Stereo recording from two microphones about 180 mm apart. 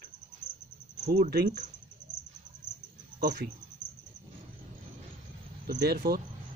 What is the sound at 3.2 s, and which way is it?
Speech, 55° right (ahead or behind).